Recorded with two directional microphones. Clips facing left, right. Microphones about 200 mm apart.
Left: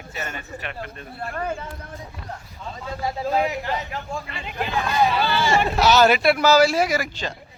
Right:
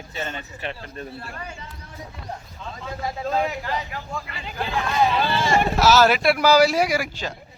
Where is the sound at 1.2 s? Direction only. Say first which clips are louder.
Left 9 dB; 55° left (ahead or behind).